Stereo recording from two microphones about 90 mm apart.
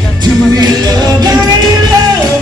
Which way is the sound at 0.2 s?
50° right (ahead or behind).